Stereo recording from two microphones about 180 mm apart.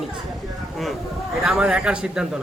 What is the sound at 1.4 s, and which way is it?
Speech, 5° right (ahead or behind).